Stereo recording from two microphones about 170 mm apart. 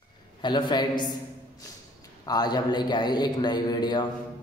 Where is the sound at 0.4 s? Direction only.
25° left (ahead or behind).